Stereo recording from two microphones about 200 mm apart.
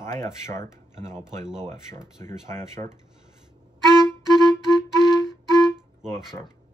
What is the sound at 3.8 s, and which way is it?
Music, 20° right (ahead or behind).